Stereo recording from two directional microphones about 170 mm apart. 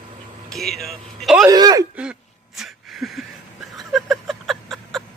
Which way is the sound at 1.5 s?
20° right (ahead or behind).